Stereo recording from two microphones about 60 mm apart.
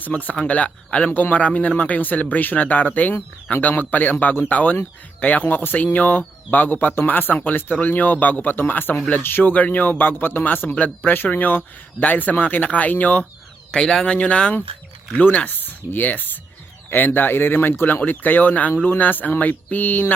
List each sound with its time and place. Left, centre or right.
0.2 s a man's voice: left
13.7 s a man's voice: centre; by 20.1 s left